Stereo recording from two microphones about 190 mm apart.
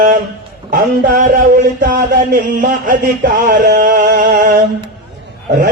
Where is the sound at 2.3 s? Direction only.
45° right (ahead or behind).